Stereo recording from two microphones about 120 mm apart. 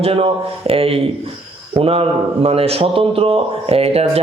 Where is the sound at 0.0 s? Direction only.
55° right (ahead or behind).